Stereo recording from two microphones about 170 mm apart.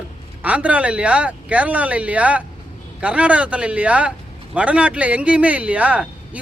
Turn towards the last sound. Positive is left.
turn(degrees=-10)  # may be behind; listen again after turning